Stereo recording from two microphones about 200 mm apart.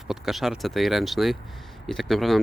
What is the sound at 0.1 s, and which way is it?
Speech, centre (ahead or behind).